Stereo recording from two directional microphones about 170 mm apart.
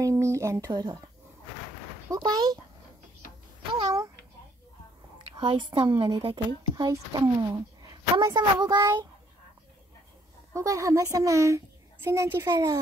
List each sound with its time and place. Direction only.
0.0 s speech: 15° right (ahead or behind)
2.0 s speech: 25° right (ahead or behind)
3.7 s a sound: 20° right (ahead or behind)
5.3 s a woman's voice: 30° right (ahead or behind)
10.5 s a woman's voice: 20° right (ahead or behind)